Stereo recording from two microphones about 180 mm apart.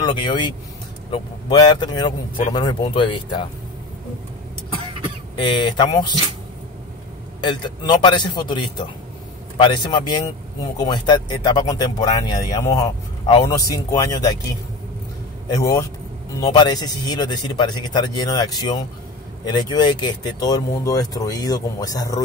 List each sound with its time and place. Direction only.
0.0 s speech: 25° left (ahead or behind)
5.4 s speech: 25° left (ahead or behind)
7.4 s speech: 25° left (ahead or behind)
15.5 s speech: 20° left (ahead or behind)